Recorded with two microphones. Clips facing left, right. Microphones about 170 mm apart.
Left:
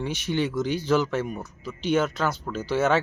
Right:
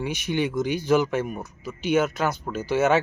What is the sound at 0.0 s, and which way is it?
Speech, 10° right (ahead or behind).